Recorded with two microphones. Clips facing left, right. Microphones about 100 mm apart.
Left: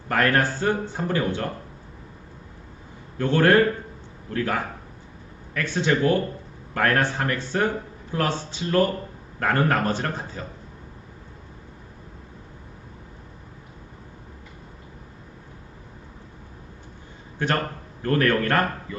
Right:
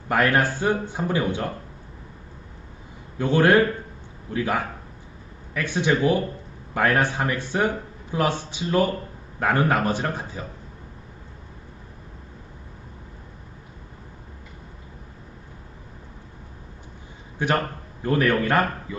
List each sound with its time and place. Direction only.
0.1 s speech: 10° right (ahead or behind)
3.2 s speech: 15° right (ahead or behind)
17.4 s speech: 15° right (ahead or behind)